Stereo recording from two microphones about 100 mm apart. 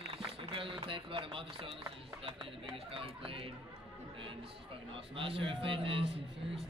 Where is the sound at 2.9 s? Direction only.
65° right (ahead or behind).